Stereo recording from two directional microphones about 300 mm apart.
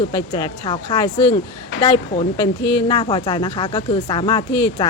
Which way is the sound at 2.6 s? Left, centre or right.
Left.